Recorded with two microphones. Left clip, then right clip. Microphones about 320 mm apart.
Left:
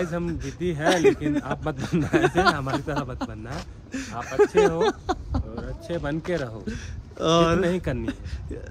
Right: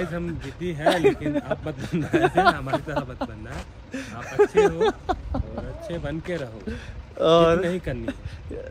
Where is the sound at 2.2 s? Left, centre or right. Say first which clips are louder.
Right 4 dB; centre.